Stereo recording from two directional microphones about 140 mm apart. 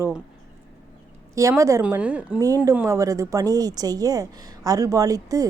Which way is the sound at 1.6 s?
20° right (ahead or behind).